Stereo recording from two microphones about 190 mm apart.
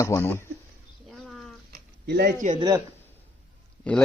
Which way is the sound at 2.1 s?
60° right (ahead or behind).